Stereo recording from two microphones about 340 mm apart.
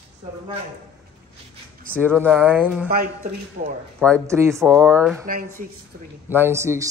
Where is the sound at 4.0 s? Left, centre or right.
Centre.